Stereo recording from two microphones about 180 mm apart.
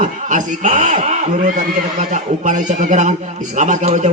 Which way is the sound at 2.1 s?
45° right (ahead or behind).